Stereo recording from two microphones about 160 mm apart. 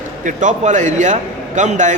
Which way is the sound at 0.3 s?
50° right (ahead or behind).